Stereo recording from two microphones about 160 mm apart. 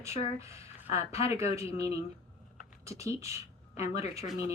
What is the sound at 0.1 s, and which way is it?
Speech, 40° left (ahead or behind).